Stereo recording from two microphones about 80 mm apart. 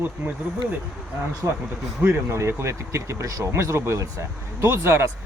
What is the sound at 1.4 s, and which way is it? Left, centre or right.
Speech, right.